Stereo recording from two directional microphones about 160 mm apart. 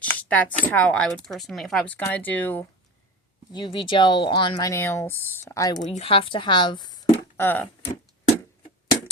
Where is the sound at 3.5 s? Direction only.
30° left (ahead or behind).